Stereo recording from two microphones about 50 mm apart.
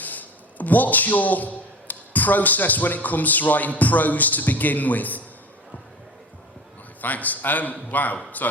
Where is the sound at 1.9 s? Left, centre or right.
Left.